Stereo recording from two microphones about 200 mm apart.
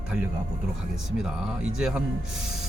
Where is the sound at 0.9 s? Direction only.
Centre (ahead or behind).